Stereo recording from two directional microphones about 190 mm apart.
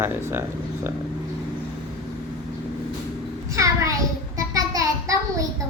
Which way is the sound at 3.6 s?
15° right (ahead or behind).